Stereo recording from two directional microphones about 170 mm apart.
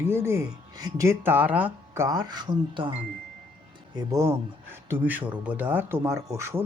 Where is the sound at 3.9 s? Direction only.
20° right (ahead or behind).